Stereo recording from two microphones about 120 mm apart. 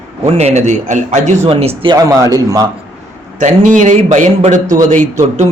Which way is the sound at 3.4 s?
90° right.